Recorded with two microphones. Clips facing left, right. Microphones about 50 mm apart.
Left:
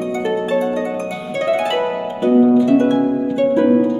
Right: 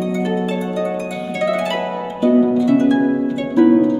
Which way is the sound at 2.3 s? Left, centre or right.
Centre.